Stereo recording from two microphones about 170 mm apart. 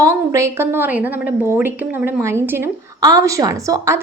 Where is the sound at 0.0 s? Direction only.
15° right (ahead or behind).